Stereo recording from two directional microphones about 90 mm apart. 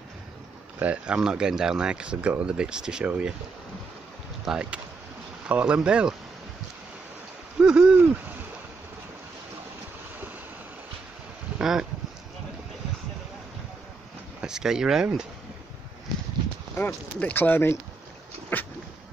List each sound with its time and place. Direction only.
0.7 s speech: 15° right (ahead or behind)
4.5 s speech: 10° right (ahead or behind)
7.5 s hoot: 10° right (ahead or behind)
11.5 s a sound: 5° right (ahead or behind)
14.4 s speech: 5° right (ahead or behind)
16.7 s speech: 20° left (ahead or behind)
18.5 s dog: 20° left (ahead or behind)